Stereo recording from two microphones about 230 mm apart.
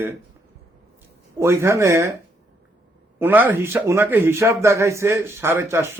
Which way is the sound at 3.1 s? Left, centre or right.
Centre.